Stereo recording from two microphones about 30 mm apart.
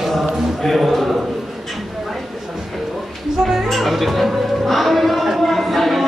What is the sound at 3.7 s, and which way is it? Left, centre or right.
Music, centre.